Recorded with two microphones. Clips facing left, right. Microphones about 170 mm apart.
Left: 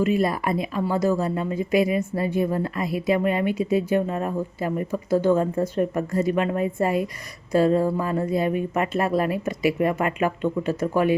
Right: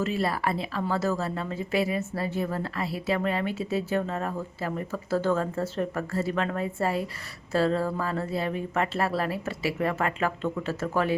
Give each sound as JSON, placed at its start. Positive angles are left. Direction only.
{"t": 0.0, "sound": "a woman's voice", "side_deg": 15}